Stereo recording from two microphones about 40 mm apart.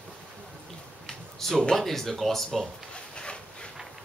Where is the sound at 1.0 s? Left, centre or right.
Centre.